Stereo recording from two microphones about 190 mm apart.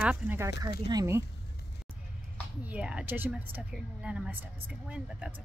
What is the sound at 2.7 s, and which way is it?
A woman's voice, 5° right (ahead or behind).